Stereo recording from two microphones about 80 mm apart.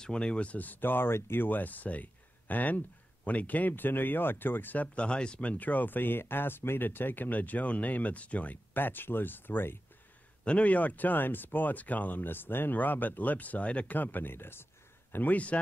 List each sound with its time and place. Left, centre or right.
0.0 s speech: centre; by 9.8 s left
10.4 s a man's voice: centre